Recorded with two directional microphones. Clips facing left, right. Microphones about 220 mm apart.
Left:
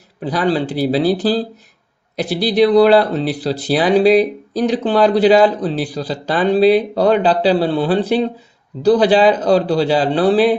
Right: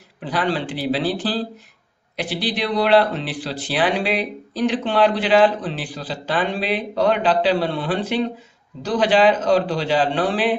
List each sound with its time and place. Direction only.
0.3 s speech: 40° left (ahead or behind)